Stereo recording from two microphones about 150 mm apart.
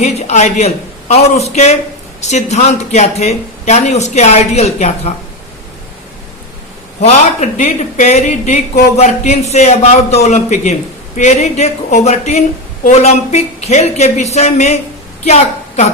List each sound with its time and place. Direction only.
0.0 s speech: 45° left (ahead or behind)
7.0 s a woman's voice: 50° left (ahead or behind)